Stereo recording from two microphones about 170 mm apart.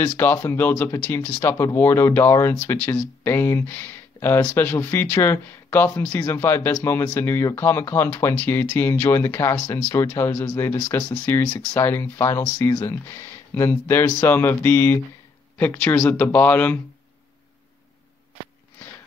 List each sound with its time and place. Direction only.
0.0 s speech: 10° left (ahead or behind)